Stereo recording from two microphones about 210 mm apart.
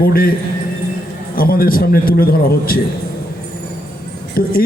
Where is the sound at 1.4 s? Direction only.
45° left (ahead or behind).